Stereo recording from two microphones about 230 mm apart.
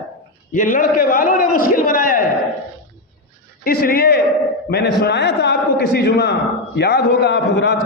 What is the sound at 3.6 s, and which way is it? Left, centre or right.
A man's voice, left.